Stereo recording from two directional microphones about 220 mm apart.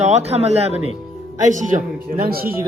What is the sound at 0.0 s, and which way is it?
Speech, 30° right (ahead or behind).